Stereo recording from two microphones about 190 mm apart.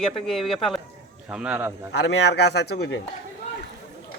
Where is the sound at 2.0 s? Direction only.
65° left (ahead or behind).